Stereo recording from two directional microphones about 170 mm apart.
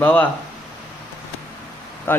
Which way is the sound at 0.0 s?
10° left (ahead or behind).